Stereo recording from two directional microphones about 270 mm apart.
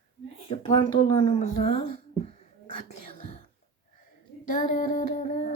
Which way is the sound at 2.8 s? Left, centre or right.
Left.